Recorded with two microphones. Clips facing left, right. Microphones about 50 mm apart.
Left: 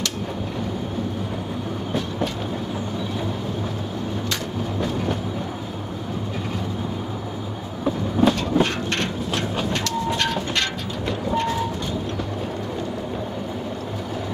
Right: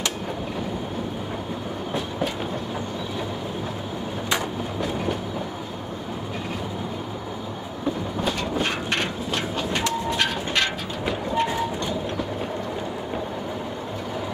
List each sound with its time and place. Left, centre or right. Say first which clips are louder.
2.0 s train: left 1 dB; centre
4.7 s train: left 2 dB; centre
8.2 s train: left 9 dB; centre